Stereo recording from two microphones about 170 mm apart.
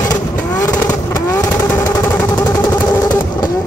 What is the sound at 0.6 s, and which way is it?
Vehicle, 20° left (ahead or behind).